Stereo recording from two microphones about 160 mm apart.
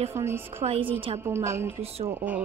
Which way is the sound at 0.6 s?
35° right (ahead or behind).